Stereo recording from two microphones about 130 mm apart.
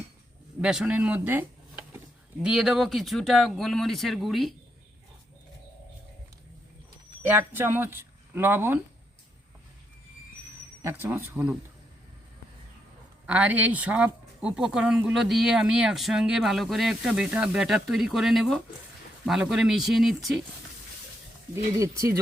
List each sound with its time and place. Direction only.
0.6 s speech: 5° right (ahead or behind)
2.4 s speech: 5° right (ahead or behind)
7.3 s speech: 15° right (ahead or behind)
10.8 s speech: 20° right (ahead or behind)
13.2 s speech: 10° right (ahead or behind)
21.5 s speech: 20° right (ahead or behind)